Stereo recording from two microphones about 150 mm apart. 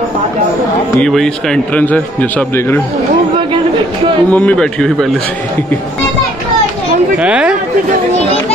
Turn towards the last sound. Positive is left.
turn(degrees=-10)  # may be behind; listen again after turning